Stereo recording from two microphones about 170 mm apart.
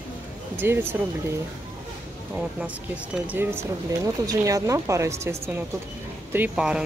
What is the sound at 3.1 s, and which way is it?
A woman's voice, 10° right (ahead or behind).